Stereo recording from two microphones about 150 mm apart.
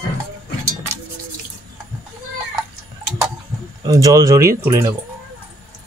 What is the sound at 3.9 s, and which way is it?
Speech, 25° right (ahead or behind).